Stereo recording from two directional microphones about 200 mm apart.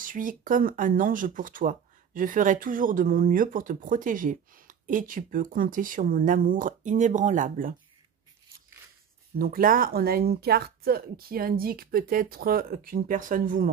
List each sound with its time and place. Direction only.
0.0 s speech: 40° right (ahead or behind)
9.4 s speech: 45° right (ahead or behind)